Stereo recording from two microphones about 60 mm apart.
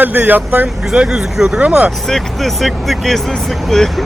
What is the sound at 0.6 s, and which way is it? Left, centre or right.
Speech, centre.